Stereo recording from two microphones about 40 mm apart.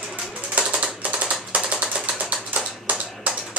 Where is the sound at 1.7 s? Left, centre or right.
Right.